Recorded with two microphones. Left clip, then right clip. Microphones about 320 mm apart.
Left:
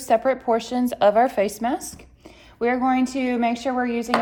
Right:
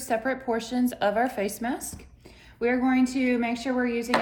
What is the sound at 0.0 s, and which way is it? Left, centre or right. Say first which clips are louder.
Speech: left 8 dB; left.